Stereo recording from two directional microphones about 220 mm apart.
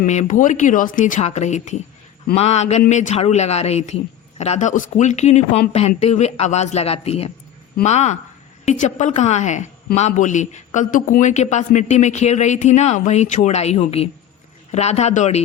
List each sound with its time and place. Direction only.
0.0 s a woman's voice: 35° left (ahead or behind)